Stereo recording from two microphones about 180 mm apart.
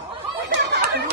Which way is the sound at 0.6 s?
65° right (ahead or behind).